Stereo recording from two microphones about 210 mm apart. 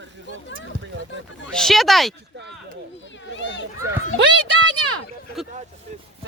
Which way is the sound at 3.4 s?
60° left (ahead or behind).